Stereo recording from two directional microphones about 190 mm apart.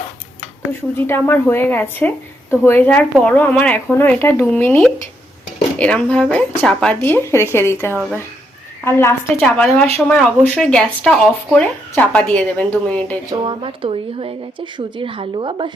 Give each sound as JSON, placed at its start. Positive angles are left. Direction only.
{"t": 0.7, "sound": "a woman's voice", "side_deg": 10}
{"t": 7.9, "sound": "speech", "side_deg": -5}
{"t": 8.8, "sound": "a woman's voice", "side_deg": 15}
{"t": 13.3, "sound": "speech", "side_deg": -25}